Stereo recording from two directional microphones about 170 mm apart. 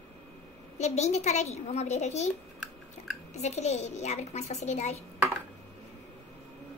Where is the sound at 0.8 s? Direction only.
40° left (ahead or behind).